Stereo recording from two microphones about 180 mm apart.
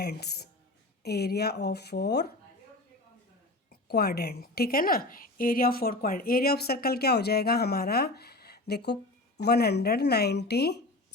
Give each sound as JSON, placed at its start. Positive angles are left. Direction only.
{"t": 0.0, "sound": "a woman's voice", "side_deg": 65}
{"t": 3.7, "sound": "a woman's voice", "side_deg": 60}